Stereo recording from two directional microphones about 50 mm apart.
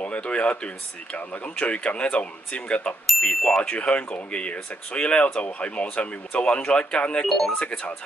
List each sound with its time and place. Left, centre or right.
0.0 s speech: left
7.2 s speech: centre
7.5 s speech: left